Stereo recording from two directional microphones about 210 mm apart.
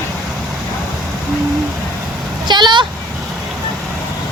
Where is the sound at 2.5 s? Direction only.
20° right (ahead or behind).